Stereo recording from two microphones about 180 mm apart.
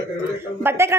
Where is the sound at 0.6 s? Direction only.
15° right (ahead or behind).